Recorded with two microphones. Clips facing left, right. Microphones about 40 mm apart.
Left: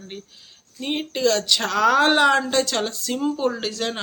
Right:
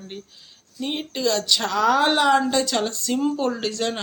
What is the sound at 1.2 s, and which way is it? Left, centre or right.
Speech, left.